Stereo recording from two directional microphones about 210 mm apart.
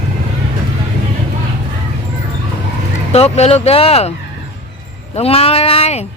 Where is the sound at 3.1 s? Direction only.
30° left (ahead or behind).